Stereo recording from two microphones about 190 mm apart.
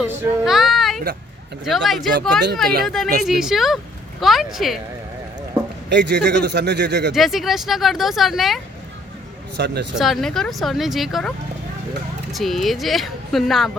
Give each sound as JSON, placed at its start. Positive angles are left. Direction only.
{"t": 0.0, "sound": "child singing", "side_deg": 0}
{"t": 1.6, "sound": "speech", "side_deg": 0}
{"t": 5.9, "sound": "a man's voice", "side_deg": -65}
{"t": 7.1, "sound": "speech", "side_deg": 0}
{"t": 9.6, "sound": "a man's voice", "side_deg": -60}
{"t": 9.9, "sound": "speech", "side_deg": 0}
{"t": 12.3, "sound": "speech", "side_deg": 0}